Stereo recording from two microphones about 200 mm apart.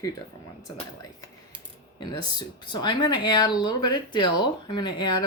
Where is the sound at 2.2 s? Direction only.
20° left (ahead or behind).